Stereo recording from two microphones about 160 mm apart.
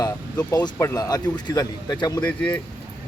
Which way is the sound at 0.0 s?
25° left (ahead or behind).